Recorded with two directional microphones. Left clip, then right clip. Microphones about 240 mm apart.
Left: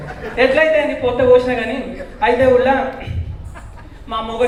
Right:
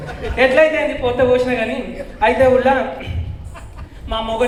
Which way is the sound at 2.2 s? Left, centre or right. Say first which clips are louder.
Even; right.